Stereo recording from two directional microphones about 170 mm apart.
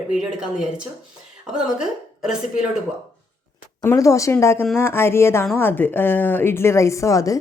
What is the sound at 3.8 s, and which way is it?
A woman's voice, 15° left (ahead or behind).